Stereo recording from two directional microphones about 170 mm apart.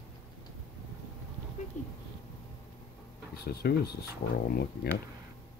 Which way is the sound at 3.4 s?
65° left (ahead or behind).